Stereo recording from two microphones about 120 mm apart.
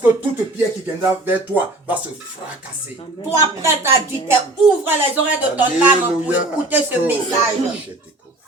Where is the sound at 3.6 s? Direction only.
20° right (ahead or behind).